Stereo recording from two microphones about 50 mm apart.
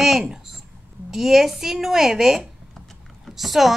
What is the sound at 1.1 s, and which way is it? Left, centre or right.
A woman's voice, centre.